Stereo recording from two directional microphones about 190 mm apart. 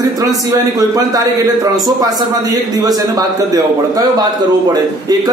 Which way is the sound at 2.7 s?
20° right (ahead or behind).